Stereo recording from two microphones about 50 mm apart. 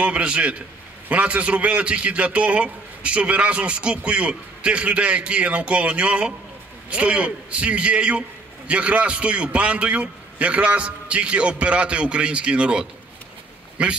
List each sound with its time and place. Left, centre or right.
0.0 s a man's voice: right